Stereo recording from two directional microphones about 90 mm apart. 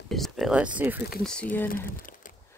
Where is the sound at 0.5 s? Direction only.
15° right (ahead or behind).